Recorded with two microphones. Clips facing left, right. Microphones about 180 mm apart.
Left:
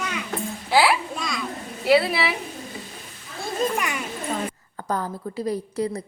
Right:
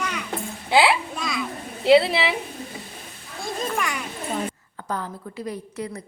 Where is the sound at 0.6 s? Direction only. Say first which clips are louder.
Right 1 dB; 20° right (ahead or behind).